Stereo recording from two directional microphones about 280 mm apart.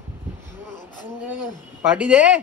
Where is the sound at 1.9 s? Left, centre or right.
Centre.